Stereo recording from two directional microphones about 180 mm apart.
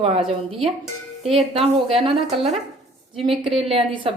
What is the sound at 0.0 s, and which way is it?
A woman's voice, 35° right (ahead or behind).